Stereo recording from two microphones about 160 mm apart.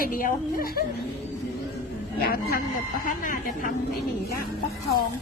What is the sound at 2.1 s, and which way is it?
Speech, 70° left (ahead or behind).